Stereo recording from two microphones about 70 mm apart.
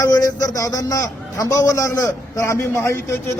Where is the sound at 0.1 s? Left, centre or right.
Left.